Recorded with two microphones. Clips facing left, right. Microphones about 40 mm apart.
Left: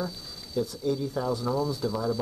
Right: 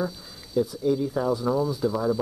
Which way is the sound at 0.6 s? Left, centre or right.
Centre.